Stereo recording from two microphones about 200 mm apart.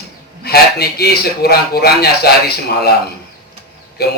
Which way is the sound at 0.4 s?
55° left (ahead or behind).